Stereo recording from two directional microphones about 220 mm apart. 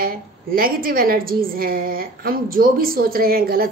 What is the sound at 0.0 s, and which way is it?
A woman's voice, 40° right (ahead or behind).